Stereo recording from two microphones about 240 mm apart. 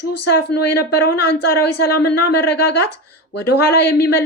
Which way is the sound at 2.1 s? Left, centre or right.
Left.